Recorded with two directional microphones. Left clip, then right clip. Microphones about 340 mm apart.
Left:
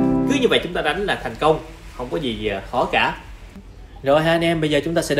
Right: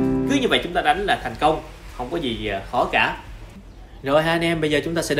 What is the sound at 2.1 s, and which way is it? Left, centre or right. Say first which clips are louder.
Speech: left 2 dB; centre.